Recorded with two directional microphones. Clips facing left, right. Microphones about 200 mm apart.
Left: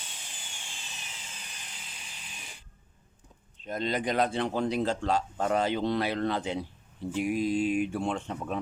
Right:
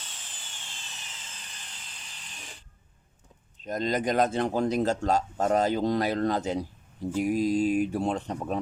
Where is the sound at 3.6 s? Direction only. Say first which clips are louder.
Right 3 dB; 40° right (ahead or behind).